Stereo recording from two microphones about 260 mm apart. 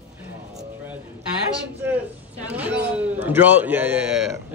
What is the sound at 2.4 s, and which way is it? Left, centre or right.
A man's voice, centre.